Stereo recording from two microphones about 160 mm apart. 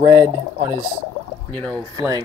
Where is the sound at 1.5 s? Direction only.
5° left (ahead or behind).